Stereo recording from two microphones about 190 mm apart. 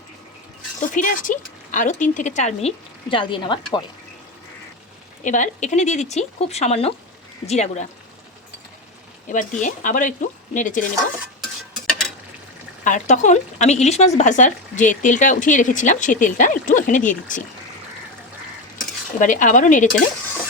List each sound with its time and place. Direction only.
0.8 s speech: 45° left (ahead or behind); by 3.8 s 25° left (ahead or behind)
5.2 s speech: 40° left (ahead or behind)
9.3 s speech: 40° left (ahead or behind)
12.8 s speech: 40° left (ahead or behind)
19.2 s speech: 45° left (ahead or behind)